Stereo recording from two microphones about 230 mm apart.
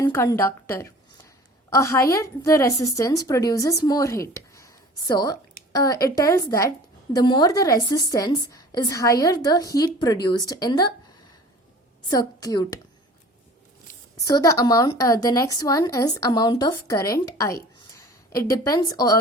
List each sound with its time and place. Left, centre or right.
0.0 s a woman's voice: centre
12.1 s a woman's voice: centre
14.2 s a woman's voice: centre